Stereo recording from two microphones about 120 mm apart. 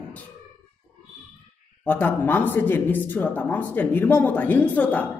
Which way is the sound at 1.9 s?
15° left (ahead or behind).